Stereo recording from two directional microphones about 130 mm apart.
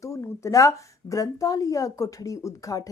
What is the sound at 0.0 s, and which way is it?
Speech, 25° left (ahead or behind).